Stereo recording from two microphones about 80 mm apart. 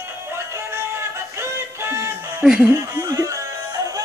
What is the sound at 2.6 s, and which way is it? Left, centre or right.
Speech, right.